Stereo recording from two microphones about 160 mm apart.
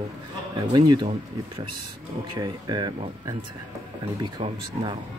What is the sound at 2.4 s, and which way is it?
Speech, 25° right (ahead or behind).